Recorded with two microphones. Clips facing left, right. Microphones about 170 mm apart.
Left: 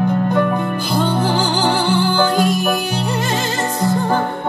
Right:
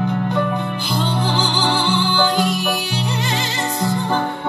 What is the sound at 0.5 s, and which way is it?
Music, 50° left (ahead or behind).